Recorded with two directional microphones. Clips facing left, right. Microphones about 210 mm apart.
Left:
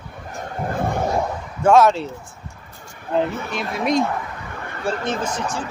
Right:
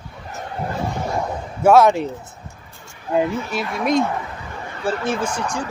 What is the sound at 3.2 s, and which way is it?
Speech, 55° left (ahead or behind).